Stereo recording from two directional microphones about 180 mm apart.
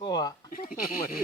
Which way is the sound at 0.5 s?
50° left (ahead or behind).